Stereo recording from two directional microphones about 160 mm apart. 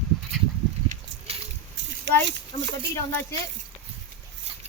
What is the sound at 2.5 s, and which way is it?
Speech, 35° left (ahead or behind).